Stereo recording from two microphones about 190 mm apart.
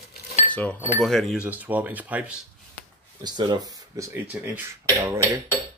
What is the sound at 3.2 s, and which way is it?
Speech, 20° right (ahead or behind).